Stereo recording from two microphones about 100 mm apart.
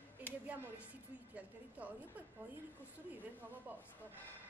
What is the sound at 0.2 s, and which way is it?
A woman's voice, 20° right (ahead or behind).